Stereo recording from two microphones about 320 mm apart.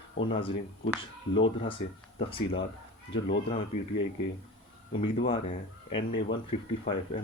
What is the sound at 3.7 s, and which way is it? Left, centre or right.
Speech, left.